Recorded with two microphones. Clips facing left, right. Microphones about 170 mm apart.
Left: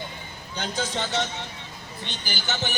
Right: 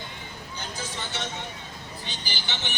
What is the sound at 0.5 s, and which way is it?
Speech, 80° left.